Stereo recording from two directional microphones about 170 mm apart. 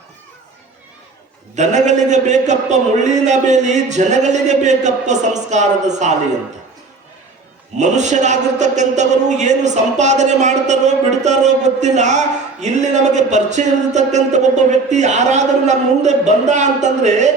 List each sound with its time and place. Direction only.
1.5 s a man's voice: 45° right (ahead or behind)
7.8 s a man's voice: 45° right (ahead or behind)